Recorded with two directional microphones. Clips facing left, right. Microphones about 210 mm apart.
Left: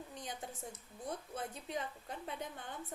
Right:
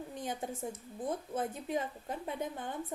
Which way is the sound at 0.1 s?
50° right (ahead or behind).